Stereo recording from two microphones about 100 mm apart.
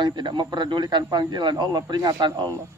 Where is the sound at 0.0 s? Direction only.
50° right (ahead or behind).